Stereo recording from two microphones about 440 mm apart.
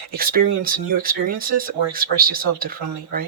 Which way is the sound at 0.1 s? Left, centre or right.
Centre.